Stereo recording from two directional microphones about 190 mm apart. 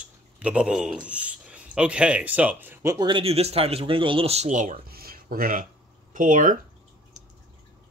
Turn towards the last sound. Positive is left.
turn(degrees=-45)  # may be behind; listen again after turning